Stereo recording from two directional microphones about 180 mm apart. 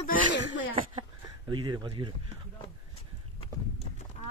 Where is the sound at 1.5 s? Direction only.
25° right (ahead or behind).